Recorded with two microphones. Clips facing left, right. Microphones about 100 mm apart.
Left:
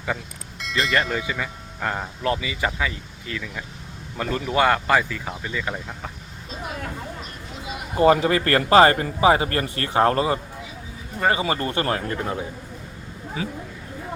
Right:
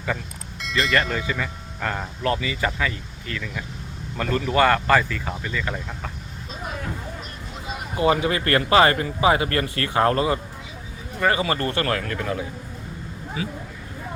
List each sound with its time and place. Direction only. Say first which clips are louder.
0.6 s speech: right 1 dB; centre (ahead or behind)
1.2 s speech: right 1 dB; 15° left (ahead or behind)
7.9 s speech: left 4 dB; 40° left (ahead or behind)